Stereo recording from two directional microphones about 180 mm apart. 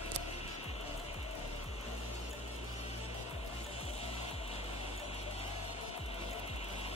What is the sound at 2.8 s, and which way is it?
Music, 35° left (ahead or behind).